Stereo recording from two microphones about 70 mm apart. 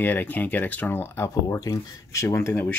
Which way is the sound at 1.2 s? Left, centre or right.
Left.